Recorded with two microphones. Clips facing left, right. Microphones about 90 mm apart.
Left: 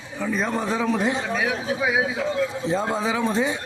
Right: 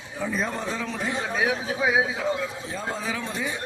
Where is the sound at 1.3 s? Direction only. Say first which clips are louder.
Left 1 dB; 25° right (ahead or behind).